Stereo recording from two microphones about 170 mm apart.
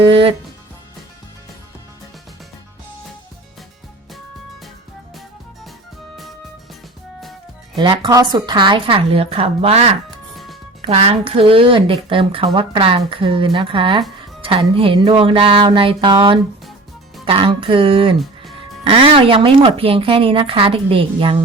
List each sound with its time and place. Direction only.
0.1 s a woman's voice: 30° right (ahead or behind)
7.8 s a woman's voice: 25° right (ahead or behind)
10.1 s music: centre (ahead or behind)
10.8 s a woman's voice: 35° right (ahead or behind)